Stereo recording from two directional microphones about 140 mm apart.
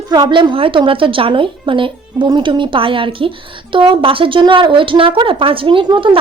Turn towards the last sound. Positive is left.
turn(degrees=-35)  # may be behind; listen again after turning